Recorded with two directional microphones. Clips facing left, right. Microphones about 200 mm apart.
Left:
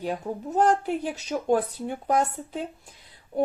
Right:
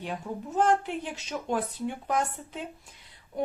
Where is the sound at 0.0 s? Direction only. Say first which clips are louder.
Left 5 dB; 40° left (ahead or behind).